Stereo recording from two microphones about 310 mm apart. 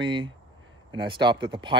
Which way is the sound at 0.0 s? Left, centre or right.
Centre.